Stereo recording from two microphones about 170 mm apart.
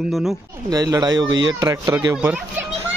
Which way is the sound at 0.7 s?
20° right (ahead or behind).